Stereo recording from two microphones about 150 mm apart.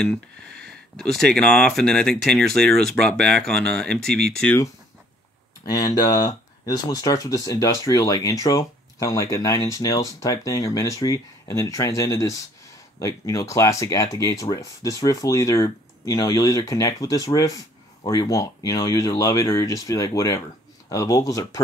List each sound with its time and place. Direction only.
0.0 s speech: 5° left (ahead or behind)
5.7 s speech: 25° left (ahead or behind)